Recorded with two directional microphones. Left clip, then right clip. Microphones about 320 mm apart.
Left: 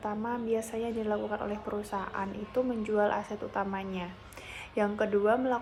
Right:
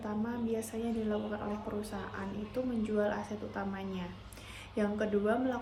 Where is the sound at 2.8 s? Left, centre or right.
Centre.